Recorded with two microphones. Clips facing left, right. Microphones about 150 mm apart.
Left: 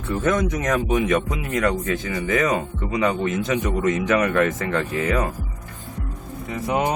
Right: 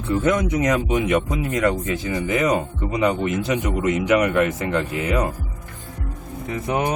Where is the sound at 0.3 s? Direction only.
15° right (ahead or behind).